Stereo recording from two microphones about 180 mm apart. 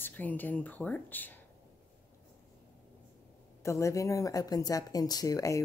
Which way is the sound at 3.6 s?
15° left (ahead or behind).